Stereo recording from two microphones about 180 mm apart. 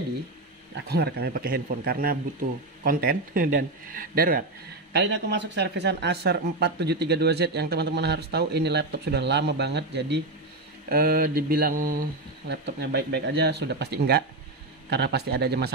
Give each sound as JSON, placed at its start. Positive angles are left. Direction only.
{"t": 0.7, "sound": "mantra", "side_deg": -65}
{"t": 2.8, "sound": "speech", "side_deg": -55}
{"t": 4.9, "sound": "speech", "side_deg": -75}
{"t": 10.9, "sound": "mantra", "side_deg": -60}
{"t": 12.6, "sound": "mantra", "side_deg": -65}